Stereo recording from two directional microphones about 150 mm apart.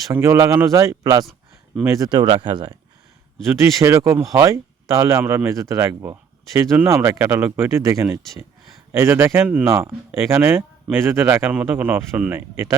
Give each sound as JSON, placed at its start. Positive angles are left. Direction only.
{"t": 0.1, "sound": "speech", "side_deg": -15}
{"t": 1.2, "sound": "a sound", "side_deg": 0}
{"t": 2.0, "sound": "speech", "side_deg": -30}
{"t": 3.4, "sound": "speech", "side_deg": -20}